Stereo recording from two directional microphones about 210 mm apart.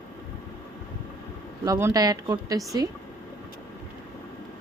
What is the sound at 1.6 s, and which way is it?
Speech, 15° right (ahead or behind).